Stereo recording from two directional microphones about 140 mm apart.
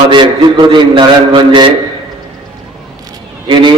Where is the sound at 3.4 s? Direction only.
35° right (ahead or behind).